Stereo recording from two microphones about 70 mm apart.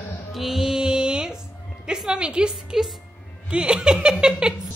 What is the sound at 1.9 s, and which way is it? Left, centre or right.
A woman's voice, centre.